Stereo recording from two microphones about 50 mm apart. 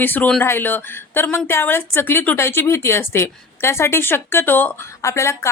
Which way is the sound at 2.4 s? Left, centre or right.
Left.